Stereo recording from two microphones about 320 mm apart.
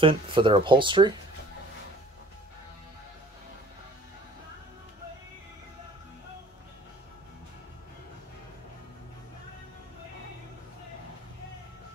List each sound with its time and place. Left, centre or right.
0.0 s speech: centre